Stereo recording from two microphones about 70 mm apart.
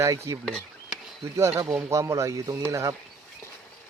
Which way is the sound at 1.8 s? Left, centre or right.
Right.